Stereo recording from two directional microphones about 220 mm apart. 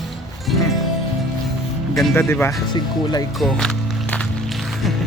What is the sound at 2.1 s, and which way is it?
Speech, 10° left (ahead or behind).